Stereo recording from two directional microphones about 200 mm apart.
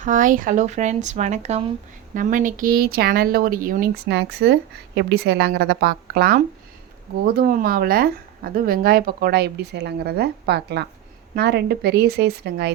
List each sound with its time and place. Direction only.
0.0 s speech: 40° right (ahead or behind); by 12.7 s 55° right (ahead or behind)